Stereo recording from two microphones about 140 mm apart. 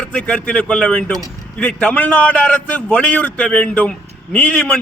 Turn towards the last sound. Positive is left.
turn(degrees=10)  # may be behind; listen again after turning